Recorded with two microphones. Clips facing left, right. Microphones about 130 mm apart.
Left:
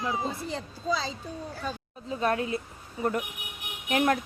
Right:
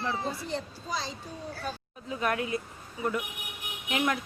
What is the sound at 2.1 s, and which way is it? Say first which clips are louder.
Speech: left 2 dB; 30° left (ahead or behind).